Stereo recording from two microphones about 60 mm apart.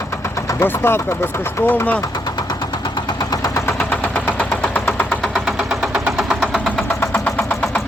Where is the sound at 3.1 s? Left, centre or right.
Left.